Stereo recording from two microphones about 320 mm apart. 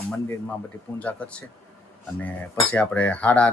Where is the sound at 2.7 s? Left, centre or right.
Centre.